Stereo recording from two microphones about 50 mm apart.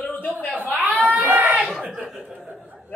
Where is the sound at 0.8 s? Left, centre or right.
Right.